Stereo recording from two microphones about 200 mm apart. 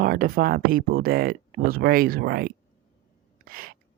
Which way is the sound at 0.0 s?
45° right (ahead or behind).